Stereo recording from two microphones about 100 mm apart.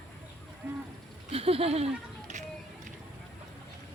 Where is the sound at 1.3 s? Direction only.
75° right (ahead or behind).